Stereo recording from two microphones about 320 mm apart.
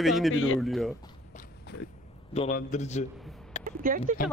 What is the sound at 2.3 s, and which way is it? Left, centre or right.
Speech, left.